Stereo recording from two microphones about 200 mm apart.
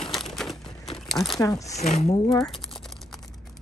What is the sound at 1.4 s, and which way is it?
Speech, 15° left (ahead or behind).